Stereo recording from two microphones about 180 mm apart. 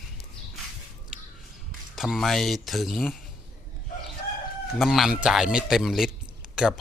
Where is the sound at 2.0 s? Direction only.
Centre (ahead or behind).